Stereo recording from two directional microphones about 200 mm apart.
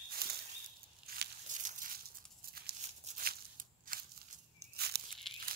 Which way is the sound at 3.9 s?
45° right (ahead or behind).